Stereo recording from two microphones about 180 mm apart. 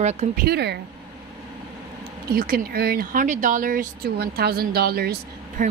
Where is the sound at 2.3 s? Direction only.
55° right (ahead or behind).